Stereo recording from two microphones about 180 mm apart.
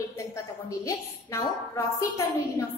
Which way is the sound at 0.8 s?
15° left (ahead or behind).